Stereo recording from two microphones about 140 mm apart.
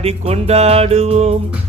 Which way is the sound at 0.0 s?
50° right (ahead or behind).